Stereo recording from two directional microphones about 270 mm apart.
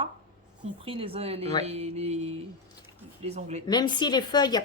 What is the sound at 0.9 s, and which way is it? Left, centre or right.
Speech, right.